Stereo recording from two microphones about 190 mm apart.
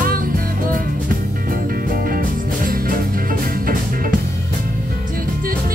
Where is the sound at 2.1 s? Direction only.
50° right (ahead or behind).